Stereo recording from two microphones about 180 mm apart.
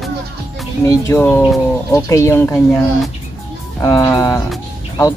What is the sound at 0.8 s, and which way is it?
Speech, 15° left (ahead or behind).